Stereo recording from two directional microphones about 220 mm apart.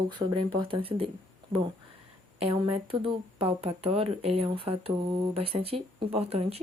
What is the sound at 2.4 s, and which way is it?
Speech, 25° right (ahead or behind).